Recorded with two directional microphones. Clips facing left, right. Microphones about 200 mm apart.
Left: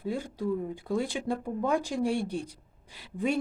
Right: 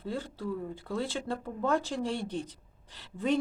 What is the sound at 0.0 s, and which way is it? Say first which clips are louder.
Speech: left 4 dB; 15° left (ahead or behind).